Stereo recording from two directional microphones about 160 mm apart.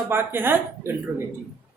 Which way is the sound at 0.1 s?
15° right (ahead or behind).